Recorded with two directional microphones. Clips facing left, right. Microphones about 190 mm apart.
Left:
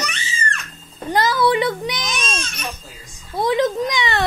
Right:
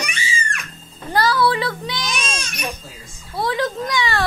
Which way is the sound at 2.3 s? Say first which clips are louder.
Right 1 dB; 10° right (ahead or behind).